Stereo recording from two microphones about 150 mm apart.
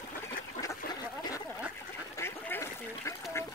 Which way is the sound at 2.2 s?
15° left (ahead or behind).